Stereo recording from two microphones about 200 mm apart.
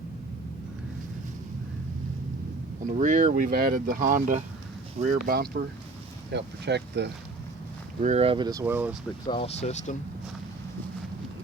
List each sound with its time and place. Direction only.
3.0 s speech: 35° right (ahead or behind); by 7.1 s 55° right (ahead or behind)
8.0 s speech: 30° right (ahead or behind); by 9.0 s 10° right (ahead or behind)
9.2 s speech: 30° left (ahead or behind)